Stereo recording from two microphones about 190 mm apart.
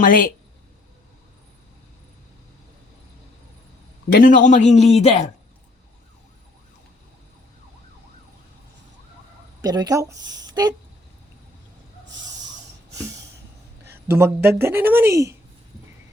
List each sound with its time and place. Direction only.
0.0 s a woman's voice: 45° left (ahead or behind)
4.1 s speech: 45° left (ahead or behind)
9.6 s speech: 20° right (ahead or behind)
14.1 s speech: 10° right (ahead or behind)